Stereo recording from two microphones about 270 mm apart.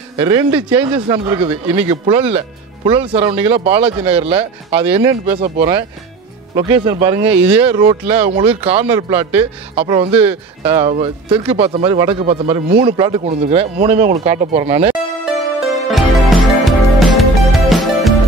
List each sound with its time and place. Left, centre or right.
0.2 s speech: centre
15.2 s music: centre